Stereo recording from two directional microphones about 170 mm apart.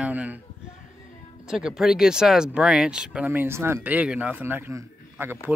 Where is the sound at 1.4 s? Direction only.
5° right (ahead or behind).